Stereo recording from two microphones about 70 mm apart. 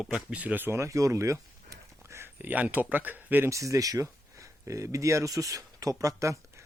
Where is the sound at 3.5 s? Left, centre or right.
Right.